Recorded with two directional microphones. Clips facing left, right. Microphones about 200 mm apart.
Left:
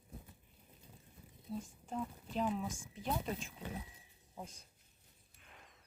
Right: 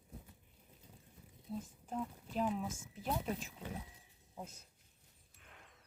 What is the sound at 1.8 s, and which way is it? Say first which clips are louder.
Speech: right 1 dB; 5° right (ahead or behind).